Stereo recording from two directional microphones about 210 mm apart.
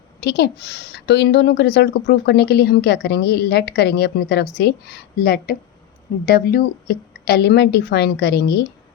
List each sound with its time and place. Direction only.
0.2 s a woman's voice: 50° left (ahead or behind)